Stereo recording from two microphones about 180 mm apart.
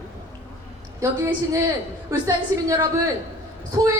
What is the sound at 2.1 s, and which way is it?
Speech, 20° right (ahead or behind).